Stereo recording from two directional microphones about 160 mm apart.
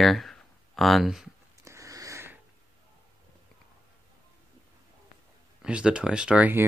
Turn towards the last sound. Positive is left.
turn(degrees=-10)  # may be behind; listen again after turning